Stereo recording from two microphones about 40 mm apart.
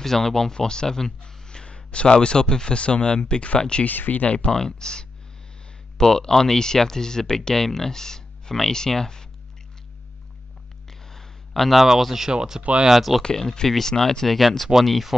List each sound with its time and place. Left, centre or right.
0.0 s speech: centre
3.8 s speech: left
4.5 s speech: centre
10.9 s a sound: centre
11.7 s speech: centre
13.4 s speech: centre